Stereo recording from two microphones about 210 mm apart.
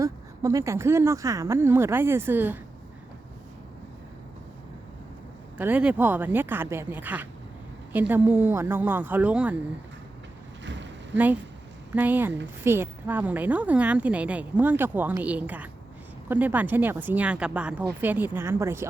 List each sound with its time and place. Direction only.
0.0 s a woman's voice: 15° right (ahead or behind)
5.5 s a woman's voice: 10° right (ahead or behind)
10.6 s vehicle: 60° right (ahead or behind)
11.9 s a woman's voice: 10° right (ahead or behind)